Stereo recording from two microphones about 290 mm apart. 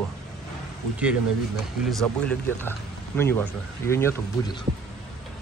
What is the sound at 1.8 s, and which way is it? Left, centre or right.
Speech, centre.